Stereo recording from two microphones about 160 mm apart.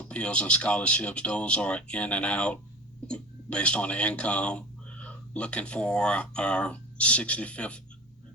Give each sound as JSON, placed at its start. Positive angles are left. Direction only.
{"t": 0.0, "sound": "speech", "side_deg": 5}